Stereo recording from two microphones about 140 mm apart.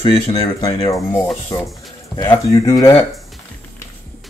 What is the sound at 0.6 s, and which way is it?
Speech, 25° left (ahead or behind).